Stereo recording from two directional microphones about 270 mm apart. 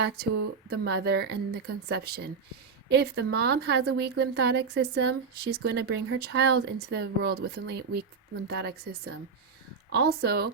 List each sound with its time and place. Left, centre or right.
0.2 s a woman's voice: right